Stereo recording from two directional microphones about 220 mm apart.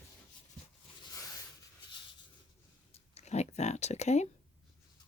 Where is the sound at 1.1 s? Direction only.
15° left (ahead or behind).